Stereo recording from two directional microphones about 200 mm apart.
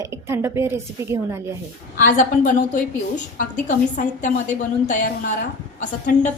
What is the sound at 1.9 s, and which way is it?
A woman's voice, 40° left (ahead or behind).